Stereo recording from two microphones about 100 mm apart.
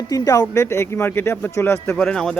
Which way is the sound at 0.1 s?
35° left (ahead or behind).